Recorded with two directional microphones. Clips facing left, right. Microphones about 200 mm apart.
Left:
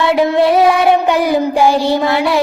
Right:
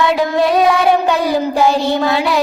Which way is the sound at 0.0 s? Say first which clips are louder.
Left 2 dB; 25° left (ahead or behind).